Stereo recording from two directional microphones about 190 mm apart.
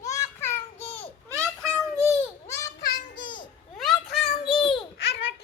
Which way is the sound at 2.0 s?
15° left (ahead or behind).